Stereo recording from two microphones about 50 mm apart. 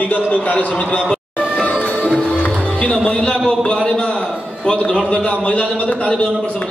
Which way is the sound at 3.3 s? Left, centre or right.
Centre.